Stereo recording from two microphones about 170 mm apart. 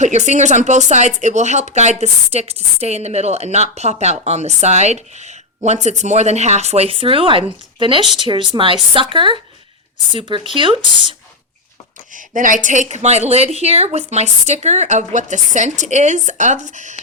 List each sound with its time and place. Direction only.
0.0 s a woman's voice: 45° right (ahead or behind)
12.1 s a woman's voice: 50° right (ahead or behind)